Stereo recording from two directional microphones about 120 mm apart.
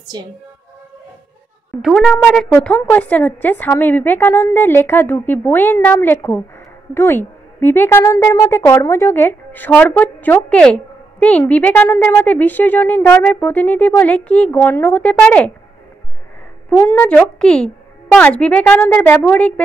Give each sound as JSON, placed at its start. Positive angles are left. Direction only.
{"t": 1.8, "sound": "a woman's voice", "side_deg": 0}
{"t": 16.7, "sound": "a woman's voice", "side_deg": 20}